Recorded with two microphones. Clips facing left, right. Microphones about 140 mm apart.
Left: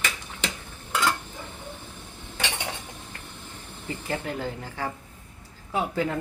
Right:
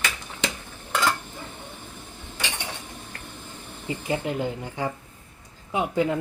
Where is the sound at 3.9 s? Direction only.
15° right (ahead or behind).